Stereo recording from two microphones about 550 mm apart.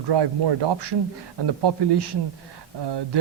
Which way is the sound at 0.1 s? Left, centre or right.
Right.